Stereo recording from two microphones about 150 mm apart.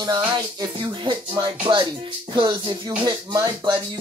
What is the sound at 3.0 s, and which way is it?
Speech, 30° right (ahead or behind).